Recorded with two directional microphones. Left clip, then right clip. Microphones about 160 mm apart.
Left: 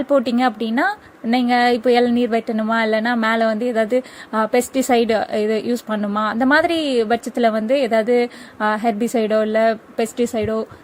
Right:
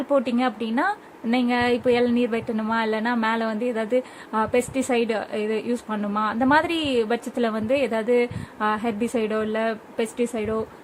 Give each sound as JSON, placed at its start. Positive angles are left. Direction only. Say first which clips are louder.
{"t": 0.1, "sound": "a woman's voice", "louder": "left 5 dB", "side_deg": 35}